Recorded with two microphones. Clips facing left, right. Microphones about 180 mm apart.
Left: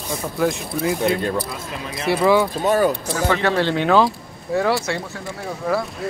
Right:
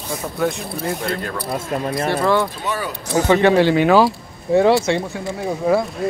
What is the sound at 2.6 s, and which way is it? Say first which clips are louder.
Speech: left 8 dB; 45° left (ahead or behind).